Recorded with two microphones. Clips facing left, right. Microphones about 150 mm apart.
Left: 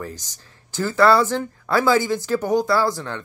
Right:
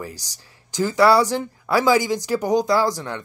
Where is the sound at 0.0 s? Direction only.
10° right (ahead or behind).